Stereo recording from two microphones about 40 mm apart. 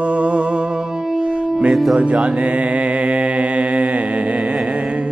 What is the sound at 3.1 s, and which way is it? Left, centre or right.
Mantra, right.